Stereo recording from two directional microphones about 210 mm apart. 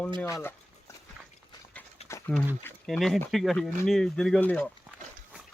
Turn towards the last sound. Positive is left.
turn(degrees=5)  # may be behind; listen again after turning